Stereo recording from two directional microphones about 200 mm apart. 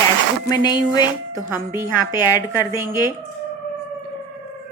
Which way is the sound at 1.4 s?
10° right (ahead or behind).